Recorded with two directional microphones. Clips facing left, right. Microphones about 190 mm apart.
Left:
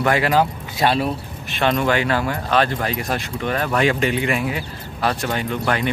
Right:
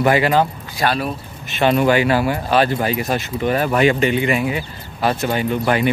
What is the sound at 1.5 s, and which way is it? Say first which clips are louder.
Speech: right 4 dB; 5° right (ahead or behind).